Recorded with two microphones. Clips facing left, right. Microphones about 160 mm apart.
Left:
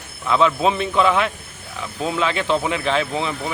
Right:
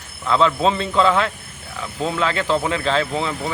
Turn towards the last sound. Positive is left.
turn(degrees=15)  # may be behind; listen again after turning